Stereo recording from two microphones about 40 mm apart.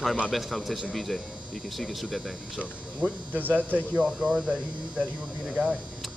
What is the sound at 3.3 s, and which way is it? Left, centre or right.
Speech, right.